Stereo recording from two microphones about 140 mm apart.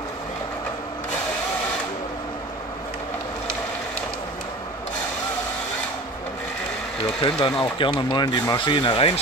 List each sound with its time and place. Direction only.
7.2 s speech: 40° left (ahead or behind)